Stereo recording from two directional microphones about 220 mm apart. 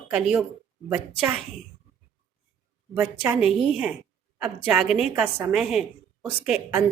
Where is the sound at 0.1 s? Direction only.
Centre (ahead or behind).